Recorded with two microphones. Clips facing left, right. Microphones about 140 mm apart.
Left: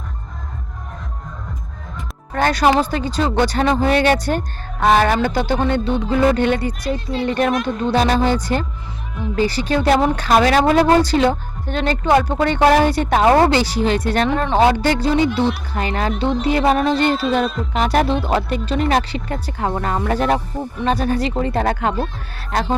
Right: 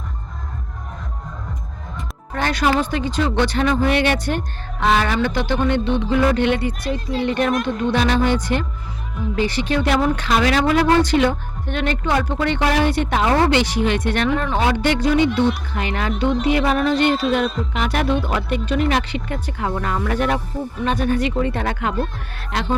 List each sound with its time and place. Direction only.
2.3 s a woman's voice: 40° left (ahead or behind)
7.5 s speech: centre (ahead or behind)
7.9 s a woman's voice: 40° left (ahead or behind)
17.4 s speech: centre (ahead or behind)
17.7 s a woman's voice: 35° left (ahead or behind)